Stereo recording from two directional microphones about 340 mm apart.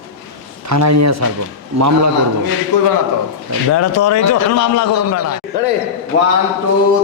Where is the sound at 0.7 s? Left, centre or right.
Right.